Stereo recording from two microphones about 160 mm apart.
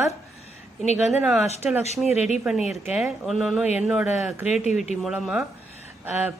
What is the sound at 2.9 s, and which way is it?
A man's voice, centre (ahead or behind).